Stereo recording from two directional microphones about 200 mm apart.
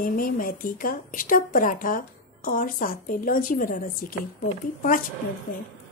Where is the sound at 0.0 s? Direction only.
45° left (ahead or behind).